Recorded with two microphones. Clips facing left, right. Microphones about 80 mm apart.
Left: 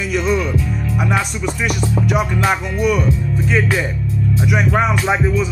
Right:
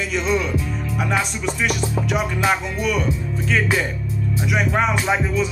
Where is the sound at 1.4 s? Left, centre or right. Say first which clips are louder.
Left 2 dB; centre.